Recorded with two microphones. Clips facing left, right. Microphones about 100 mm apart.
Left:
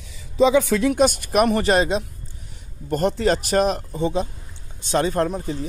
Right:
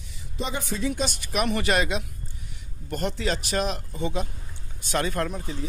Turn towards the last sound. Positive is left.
turn(degrees=35)  # may be behind; listen again after turning